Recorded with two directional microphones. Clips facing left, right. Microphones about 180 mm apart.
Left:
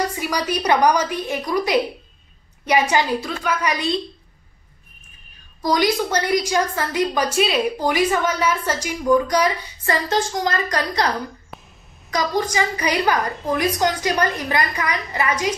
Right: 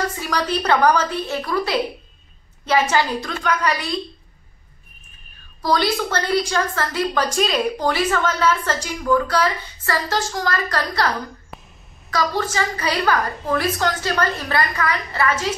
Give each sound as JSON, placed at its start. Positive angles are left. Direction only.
{"t": 0.1, "sound": "a woman's voice", "side_deg": 10}
{"t": 5.6, "sound": "a woman's voice", "side_deg": 15}
{"t": 12.1, "sound": "a woman's voice", "side_deg": 15}